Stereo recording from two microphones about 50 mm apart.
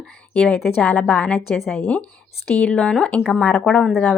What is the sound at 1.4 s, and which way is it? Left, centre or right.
Speech, centre.